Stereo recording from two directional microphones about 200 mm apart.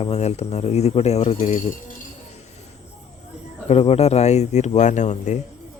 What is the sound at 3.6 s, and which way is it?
Speech, 30° left (ahead or behind).